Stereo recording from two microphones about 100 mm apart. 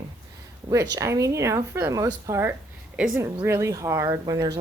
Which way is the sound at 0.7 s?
30° right (ahead or behind).